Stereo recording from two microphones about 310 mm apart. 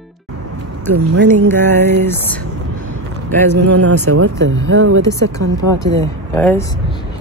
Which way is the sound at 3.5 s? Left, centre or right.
Right.